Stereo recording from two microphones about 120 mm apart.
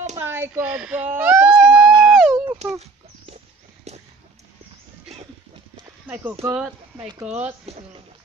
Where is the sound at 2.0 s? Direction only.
Centre (ahead or behind).